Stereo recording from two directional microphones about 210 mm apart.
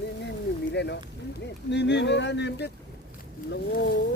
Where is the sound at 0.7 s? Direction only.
55° left (ahead or behind).